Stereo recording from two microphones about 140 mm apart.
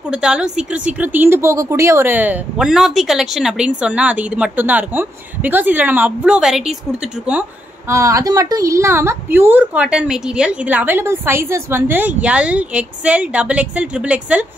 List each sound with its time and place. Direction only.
0.1 s speech: 5° right (ahead or behind)
7.9 s speech: 25° right (ahead or behind)